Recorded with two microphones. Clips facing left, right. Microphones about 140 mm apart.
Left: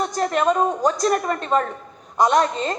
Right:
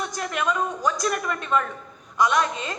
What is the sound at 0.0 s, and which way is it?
A woman's voice, 40° left (ahead or behind).